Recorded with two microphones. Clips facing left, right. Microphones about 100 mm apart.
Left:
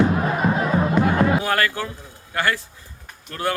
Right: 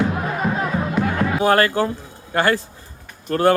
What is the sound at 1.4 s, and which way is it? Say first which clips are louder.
Speech: right 6 dB; 30° right (ahead or behind).